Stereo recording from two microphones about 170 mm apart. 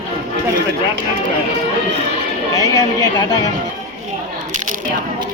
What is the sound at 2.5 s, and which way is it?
Speech, 20° left (ahead or behind).